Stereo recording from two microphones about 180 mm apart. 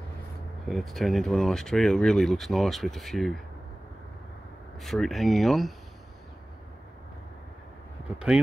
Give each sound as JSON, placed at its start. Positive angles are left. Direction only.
{"t": 0.7, "sound": "speech", "side_deg": 0}
{"t": 4.7, "sound": "speech", "side_deg": 0}